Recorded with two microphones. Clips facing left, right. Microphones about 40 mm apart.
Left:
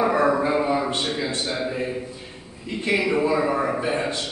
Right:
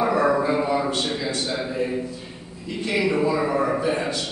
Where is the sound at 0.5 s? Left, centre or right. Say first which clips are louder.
Even; centre.